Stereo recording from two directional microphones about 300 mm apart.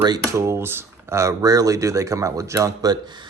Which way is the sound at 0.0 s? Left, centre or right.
Centre.